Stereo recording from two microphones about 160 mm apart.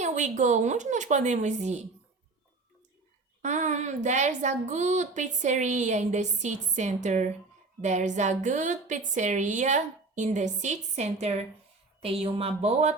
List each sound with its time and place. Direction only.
0.0 s a woman's voice: 50° right (ahead or behind)
3.4 s a woman's voice: 45° right (ahead or behind)